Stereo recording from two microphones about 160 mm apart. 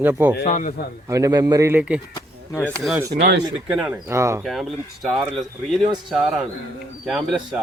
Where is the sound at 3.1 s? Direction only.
50° right (ahead or behind).